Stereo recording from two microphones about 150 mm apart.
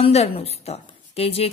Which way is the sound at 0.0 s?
45° left (ahead or behind).